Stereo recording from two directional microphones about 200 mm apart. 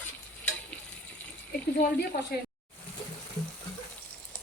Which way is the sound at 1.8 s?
50° left (ahead or behind).